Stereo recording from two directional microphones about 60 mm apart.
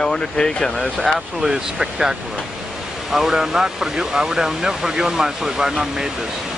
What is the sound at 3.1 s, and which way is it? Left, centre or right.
Speech, centre.